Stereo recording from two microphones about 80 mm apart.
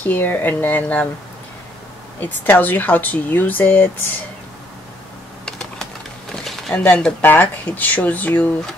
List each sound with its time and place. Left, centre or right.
0.0 s speech: left
2.1 s speech: left
5.4 s typing: centre
6.3 s a sound: centre
7.2 s speech: left